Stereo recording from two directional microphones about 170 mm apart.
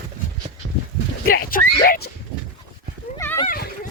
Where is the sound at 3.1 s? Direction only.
15° left (ahead or behind).